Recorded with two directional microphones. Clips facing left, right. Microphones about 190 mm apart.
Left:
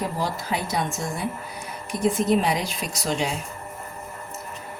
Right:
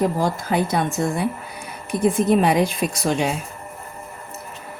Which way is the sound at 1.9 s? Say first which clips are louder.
Right 4 dB; 55° right (ahead or behind).